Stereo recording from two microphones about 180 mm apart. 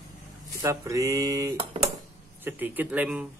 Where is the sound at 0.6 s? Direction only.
15° right (ahead or behind).